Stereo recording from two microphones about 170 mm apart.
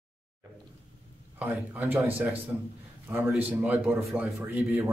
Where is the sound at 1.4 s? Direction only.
10° right (ahead or behind).